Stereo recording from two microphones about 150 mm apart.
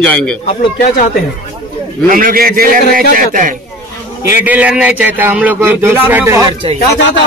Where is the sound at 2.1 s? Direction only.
65° right (ahead or behind).